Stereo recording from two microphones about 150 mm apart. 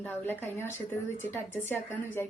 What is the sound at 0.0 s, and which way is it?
A woman's voice, 15° left (ahead or behind).